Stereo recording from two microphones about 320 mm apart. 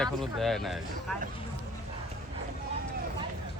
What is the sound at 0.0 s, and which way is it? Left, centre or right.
Speech, centre.